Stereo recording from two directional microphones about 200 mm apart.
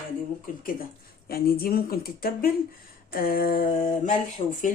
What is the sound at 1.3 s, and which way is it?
Speech, 50° left (ahead or behind).